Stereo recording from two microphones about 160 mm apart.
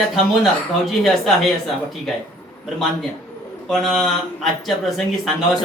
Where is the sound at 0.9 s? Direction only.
Centre (ahead or behind).